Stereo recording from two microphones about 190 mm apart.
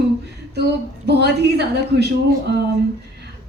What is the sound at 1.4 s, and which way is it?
A woman's voice, 60° right (ahead or behind).